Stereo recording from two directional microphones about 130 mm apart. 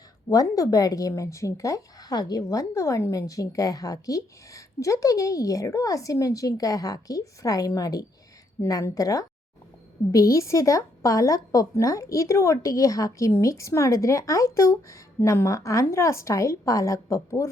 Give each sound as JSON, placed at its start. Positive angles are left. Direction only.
{"t": 0.3, "sound": "speech", "side_deg": 25}